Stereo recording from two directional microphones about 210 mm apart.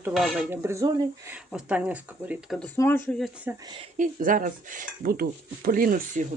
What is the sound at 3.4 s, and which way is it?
Speech, 20° right (ahead or behind).